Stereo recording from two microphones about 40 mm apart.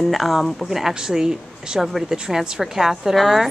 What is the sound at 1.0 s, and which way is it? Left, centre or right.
Speech, centre.